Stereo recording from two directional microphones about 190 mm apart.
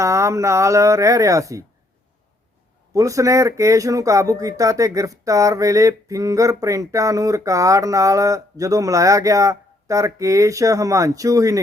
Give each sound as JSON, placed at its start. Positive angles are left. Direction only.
{"t": 0.0, "sound": "speech", "side_deg": -15}
{"t": 2.9, "sound": "speech", "side_deg": -15}